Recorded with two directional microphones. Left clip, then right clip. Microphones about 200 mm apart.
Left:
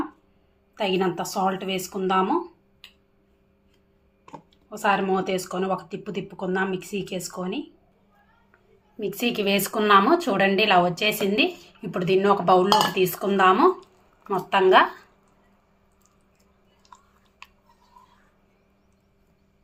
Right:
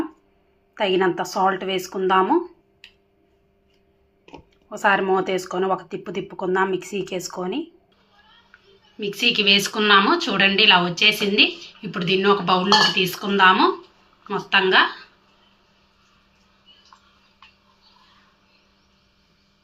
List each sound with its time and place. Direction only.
0.7 s speech: 10° right (ahead or behind)
4.7 s speech: 10° right (ahead or behind)
9.0 s speech: 50° left (ahead or behind)